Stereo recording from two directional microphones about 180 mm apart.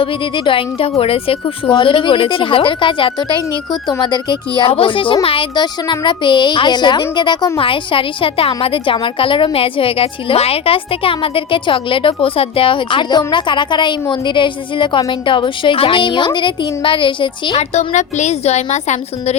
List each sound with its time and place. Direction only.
0.0 s speech: 30° left (ahead or behind)